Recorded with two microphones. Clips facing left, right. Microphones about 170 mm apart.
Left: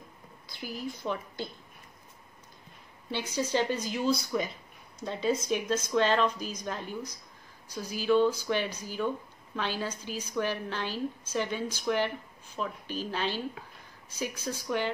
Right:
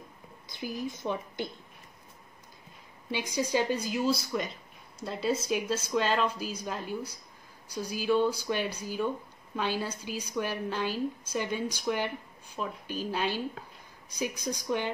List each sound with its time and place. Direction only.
0.5 s a woman's voice: 20° right (ahead or behind)
3.1 s a woman's voice: 10° right (ahead or behind)